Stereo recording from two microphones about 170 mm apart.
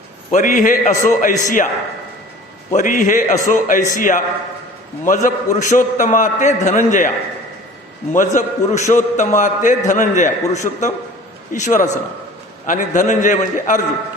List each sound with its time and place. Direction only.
0.3 s a man's voice: 50° left (ahead or behind)
2.7 s a man's voice: 50° left (ahead or behind)
8.1 s a man's voice: 50° left (ahead or behind)